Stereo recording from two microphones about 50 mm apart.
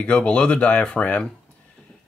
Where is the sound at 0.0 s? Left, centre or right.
Left.